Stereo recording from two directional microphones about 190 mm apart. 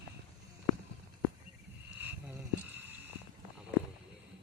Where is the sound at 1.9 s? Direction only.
10° right (ahead or behind).